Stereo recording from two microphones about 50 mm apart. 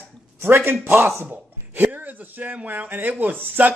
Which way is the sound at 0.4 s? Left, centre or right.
Right.